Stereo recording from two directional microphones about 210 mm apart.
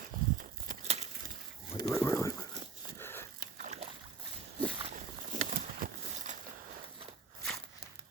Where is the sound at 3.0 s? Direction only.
10° left (ahead or behind).